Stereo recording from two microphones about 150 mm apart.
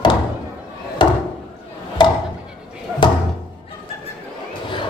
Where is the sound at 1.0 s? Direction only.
35° left (ahead or behind).